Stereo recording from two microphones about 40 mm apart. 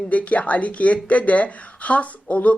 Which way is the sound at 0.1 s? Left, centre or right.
Left.